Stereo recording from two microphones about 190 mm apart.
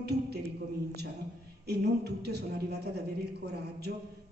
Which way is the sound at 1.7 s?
60° right (ahead or behind).